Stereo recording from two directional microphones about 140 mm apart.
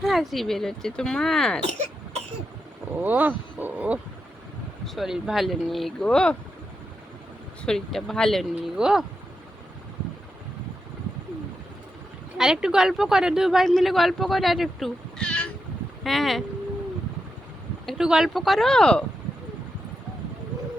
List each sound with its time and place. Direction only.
0.0 s speech: centre (ahead or behind)
1.6 s cough: 55° right (ahead or behind)
3.0 s speech: 10° right (ahead or behind); by 6.3 s 5° left (ahead or behind)
7.6 s speech: 5° left (ahead or behind)
12.4 s speech: 5° right (ahead or behind)
17.8 s speech: 5° right (ahead or behind)